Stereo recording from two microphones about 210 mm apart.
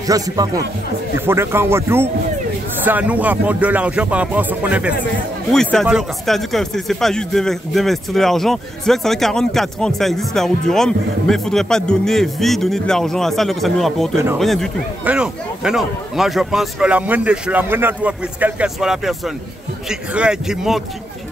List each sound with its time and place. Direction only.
0.0 s speech: 15° right (ahead or behind)